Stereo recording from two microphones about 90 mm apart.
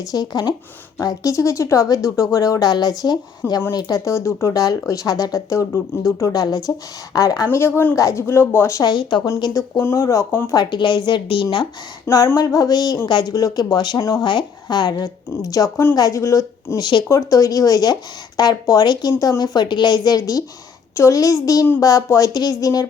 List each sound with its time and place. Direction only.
0.0 s a woman's voice: 45° left (ahead or behind)
0.9 s a woman's voice: 40° left (ahead or behind)
4.0 s speech: 35° left (ahead or behind)
6.3 s a woman's voice: 45° left (ahead or behind)
7.9 s speech: 35° left (ahead or behind)
8.8 s a woman's voice: 55° left (ahead or behind)
9.6 s speech: 30° left (ahead or behind)
10.4 s a woman's voice: 45° left (ahead or behind); by 11.4 s 65° left (ahead or behind)
12.0 s a woman's voice: 35° left (ahead or behind); by 13.3 s 55° left (ahead or behind)
13.3 s a woman's voice: 40° left (ahead or behind)
14.0 s speech: 35° left (ahead or behind)
14.3 s a woman's voice: 55° left (ahead or behind)